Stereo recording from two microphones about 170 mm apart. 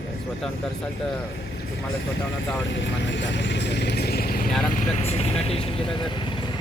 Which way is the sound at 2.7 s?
90° left.